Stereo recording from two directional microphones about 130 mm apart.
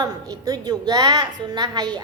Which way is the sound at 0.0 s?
30° right (ahead or behind).